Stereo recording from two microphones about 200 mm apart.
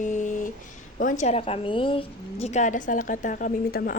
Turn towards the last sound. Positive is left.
turn(degrees=45)  # may be behind; listen again after turning